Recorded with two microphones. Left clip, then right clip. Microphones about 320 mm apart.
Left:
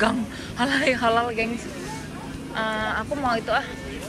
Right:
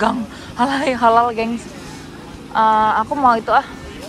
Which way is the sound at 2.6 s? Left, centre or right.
Centre.